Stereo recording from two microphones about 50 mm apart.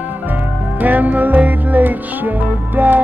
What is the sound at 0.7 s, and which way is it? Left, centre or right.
Music, right.